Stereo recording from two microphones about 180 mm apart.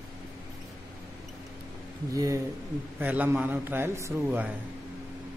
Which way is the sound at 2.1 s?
20° right (ahead or behind).